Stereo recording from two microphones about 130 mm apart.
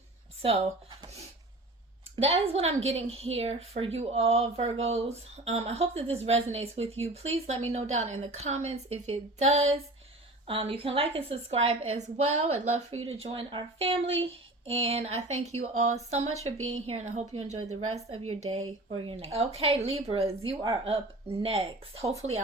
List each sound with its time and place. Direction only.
2.1 s a woman's voice: 50° right (ahead or behind)
10.4 s a woman's voice: 45° right (ahead or behind)
16.4 s a woman's voice: 55° right (ahead or behind)